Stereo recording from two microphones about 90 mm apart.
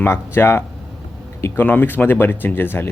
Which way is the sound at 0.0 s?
25° left (ahead or behind).